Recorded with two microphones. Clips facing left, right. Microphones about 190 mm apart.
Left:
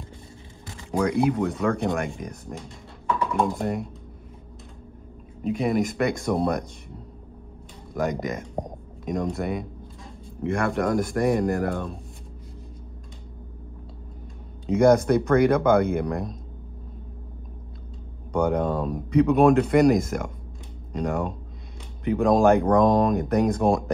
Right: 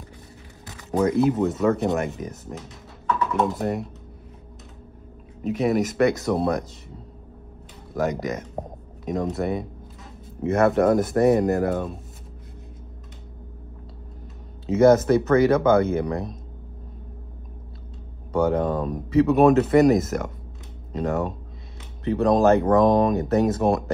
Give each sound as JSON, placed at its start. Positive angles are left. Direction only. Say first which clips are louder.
{"t": 0.9, "sound": "speech", "louder": "right 2 dB", "side_deg": -20}
{"t": 2.1, "sound": "speech", "louder": "right 2 dB", "side_deg": -5}
{"t": 5.4, "sound": "speech", "louder": "right 2 dB", "side_deg": -5}
{"t": 7.9, "sound": "speech", "louder": "right 2 dB", "side_deg": 0}
{"t": 8.6, "sound": "a sound", "louder": "right 1 dB", "side_deg": -5}
{"t": 10.4, "sound": "speech", "louder": "right 6 dB", "side_deg": -20}
{"t": 14.7, "sound": "speech", "louder": "right 2 dB", "side_deg": -5}
{"t": 18.3, "sound": "speech", "louder": "right 2 dB", "side_deg": -5}